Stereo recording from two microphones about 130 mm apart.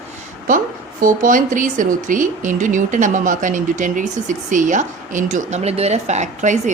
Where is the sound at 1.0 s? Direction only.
90° right.